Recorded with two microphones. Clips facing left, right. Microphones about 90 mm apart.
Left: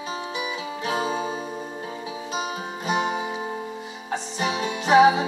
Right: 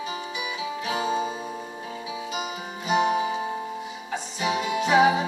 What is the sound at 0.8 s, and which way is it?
Music, 40° left (ahead or behind).